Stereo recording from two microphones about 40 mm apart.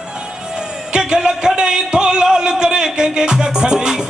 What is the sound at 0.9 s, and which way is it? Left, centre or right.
Speech, centre.